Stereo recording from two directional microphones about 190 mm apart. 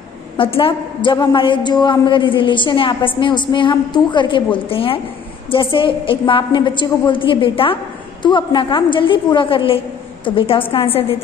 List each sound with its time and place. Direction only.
0.4 s a woman's voice: 30° left (ahead or behind)